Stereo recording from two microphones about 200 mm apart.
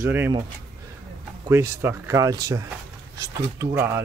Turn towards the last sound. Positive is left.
turn(degrees=-15)  # may be behind; listen again after turning